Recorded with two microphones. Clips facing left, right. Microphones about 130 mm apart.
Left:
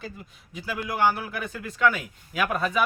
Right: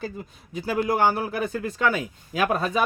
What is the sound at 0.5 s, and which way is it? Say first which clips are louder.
A man's voice: right 7 dB; 40° right (ahead or behind).